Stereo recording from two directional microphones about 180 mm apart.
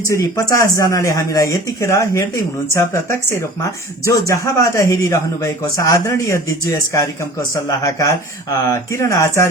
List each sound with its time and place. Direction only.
0.1 s speech: 20° left (ahead or behind)